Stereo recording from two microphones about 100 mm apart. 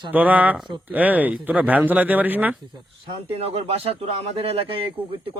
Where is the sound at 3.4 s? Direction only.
75° right (ahead or behind).